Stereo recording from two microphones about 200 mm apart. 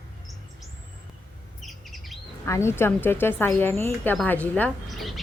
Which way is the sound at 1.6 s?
Centre (ahead or behind).